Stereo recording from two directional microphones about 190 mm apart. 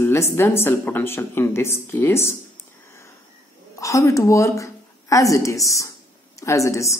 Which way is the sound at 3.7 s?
15° left (ahead or behind).